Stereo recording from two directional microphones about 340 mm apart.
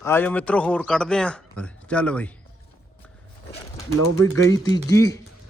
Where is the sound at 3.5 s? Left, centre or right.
Centre.